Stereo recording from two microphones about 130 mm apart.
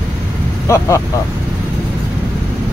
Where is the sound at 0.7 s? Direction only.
20° left (ahead or behind).